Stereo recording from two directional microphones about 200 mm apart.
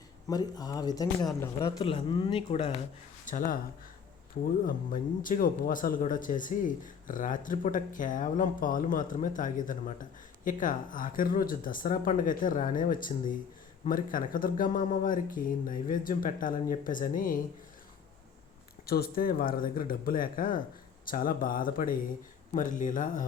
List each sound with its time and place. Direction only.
0.3 s speech: 20° left (ahead or behind)
1.8 s speech: 25° left (ahead or behind)
3.2 s speech: 45° left (ahead or behind)
4.6 s speech: 45° left (ahead or behind)
18.9 s speech: 50° left (ahead or behind)